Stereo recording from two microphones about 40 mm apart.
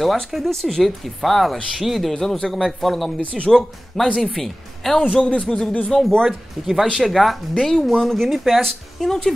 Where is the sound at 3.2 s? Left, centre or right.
Left.